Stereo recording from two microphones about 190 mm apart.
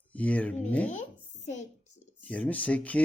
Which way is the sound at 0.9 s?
40° left (ahead or behind).